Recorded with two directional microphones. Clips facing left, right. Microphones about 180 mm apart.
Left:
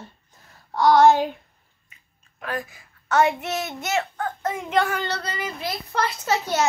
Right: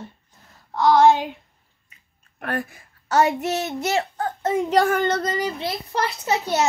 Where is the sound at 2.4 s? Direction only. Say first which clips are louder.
Right 3 dB; 60° right (ahead or behind).